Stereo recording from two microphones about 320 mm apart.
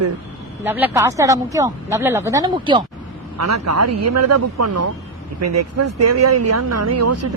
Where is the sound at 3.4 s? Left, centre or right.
Right.